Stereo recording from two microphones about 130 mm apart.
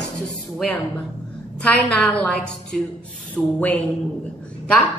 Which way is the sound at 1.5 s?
10° left (ahead or behind).